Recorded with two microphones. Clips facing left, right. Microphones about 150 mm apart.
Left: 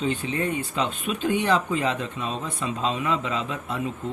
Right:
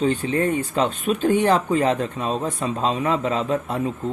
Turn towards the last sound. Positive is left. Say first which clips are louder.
# right 6 dB
turn(degrees=-40)  # may be behind; listen again after turning